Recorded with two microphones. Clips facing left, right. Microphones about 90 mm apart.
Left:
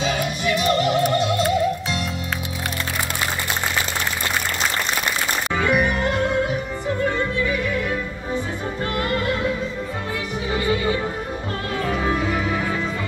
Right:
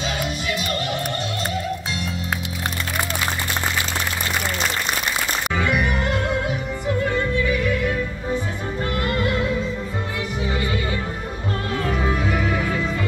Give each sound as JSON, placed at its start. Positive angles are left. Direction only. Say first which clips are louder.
{"t": 5.6, "sound": "music", "louder": "left 3 dB", "side_deg": 40}